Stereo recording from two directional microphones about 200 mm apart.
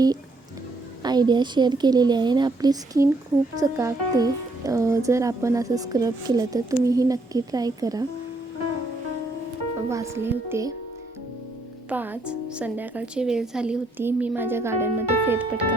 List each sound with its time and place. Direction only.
1.0 s a woman's voice: 20° right (ahead or behind)
9.9 s speech: 15° right (ahead or behind)
11.9 s speech: 10° right (ahead or behind)